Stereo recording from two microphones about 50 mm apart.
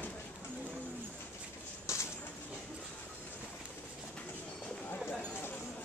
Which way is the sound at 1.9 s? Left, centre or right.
Left.